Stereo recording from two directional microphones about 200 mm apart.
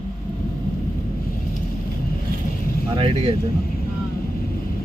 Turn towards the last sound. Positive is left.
turn(degrees=-30)  # may be behind; listen again after turning